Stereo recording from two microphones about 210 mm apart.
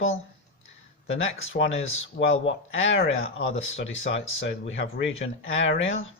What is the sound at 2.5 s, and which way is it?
Speech, 65° left (ahead or behind).